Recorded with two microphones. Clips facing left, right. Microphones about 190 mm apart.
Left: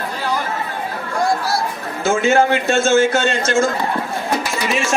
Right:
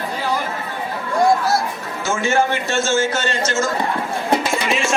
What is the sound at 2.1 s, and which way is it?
A man's voice, 60° left (ahead or behind).